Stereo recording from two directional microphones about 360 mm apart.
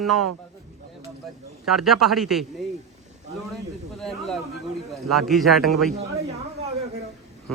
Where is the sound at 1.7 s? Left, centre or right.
Centre.